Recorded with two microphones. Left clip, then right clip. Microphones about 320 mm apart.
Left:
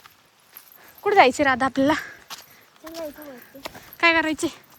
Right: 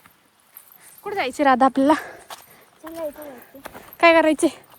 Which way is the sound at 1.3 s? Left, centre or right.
Centre.